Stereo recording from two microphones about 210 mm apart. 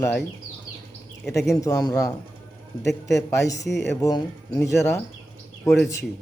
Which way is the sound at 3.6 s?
55° left (ahead or behind).